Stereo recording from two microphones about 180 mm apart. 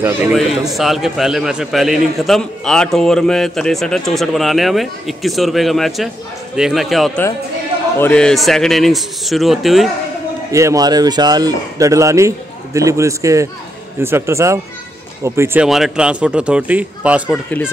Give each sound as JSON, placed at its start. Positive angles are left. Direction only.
{"t": 0.3, "sound": "a man's voice", "side_deg": 0}
{"t": 10.5, "sound": "speech", "side_deg": -15}